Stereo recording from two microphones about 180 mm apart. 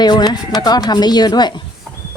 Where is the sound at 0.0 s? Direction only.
25° left (ahead or behind).